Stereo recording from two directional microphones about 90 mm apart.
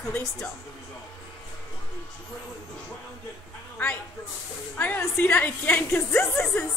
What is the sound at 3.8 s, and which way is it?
Speech, 20° left (ahead or behind).